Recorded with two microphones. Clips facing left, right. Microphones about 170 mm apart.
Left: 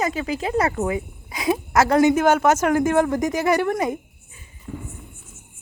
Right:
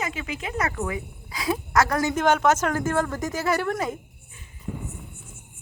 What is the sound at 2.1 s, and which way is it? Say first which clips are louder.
Speech: left 3 dB; 5° left (ahead or behind).